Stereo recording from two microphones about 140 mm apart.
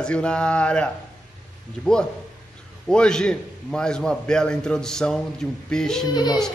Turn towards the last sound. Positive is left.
turn(degrees=30)  # may be behind; listen again after turning